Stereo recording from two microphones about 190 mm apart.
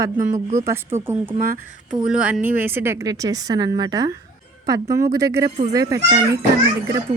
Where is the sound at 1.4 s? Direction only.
45° right (ahead or behind).